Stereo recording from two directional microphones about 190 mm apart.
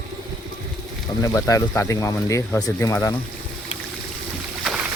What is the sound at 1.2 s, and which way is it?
Speech, 15° left (ahead or behind).